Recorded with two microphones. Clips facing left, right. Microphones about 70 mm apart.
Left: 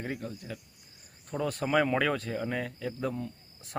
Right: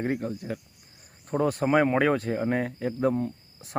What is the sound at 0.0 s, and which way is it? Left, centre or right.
Speech, right.